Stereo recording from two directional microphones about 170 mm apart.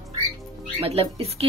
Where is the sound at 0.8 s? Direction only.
35° right (ahead or behind).